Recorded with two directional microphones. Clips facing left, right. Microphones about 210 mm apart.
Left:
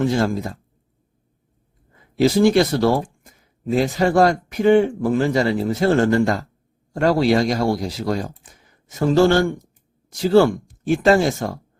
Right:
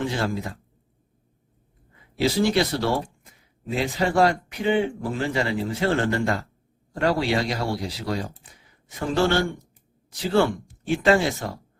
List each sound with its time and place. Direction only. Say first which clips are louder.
0.0 s speech: left 7 dB; 45° left (ahead or behind)
1.9 s speech: left 7 dB; 45° left (ahead or behind)